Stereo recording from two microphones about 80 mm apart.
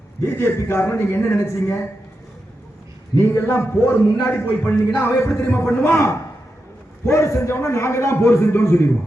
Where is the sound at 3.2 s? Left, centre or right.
Left.